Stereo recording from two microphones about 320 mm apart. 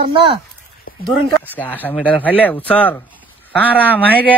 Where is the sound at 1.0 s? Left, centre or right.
Centre.